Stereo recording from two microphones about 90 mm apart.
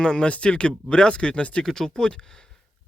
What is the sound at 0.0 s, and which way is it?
Speech, 10° left (ahead or behind).